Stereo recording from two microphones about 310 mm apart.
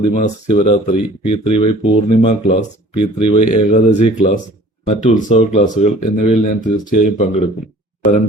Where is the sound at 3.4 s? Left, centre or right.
Left.